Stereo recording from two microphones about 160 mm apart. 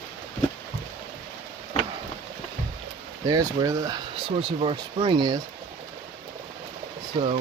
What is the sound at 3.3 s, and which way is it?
Speech, 25° right (ahead or behind).